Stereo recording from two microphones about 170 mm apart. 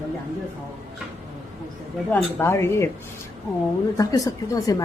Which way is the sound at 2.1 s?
10° left (ahead or behind).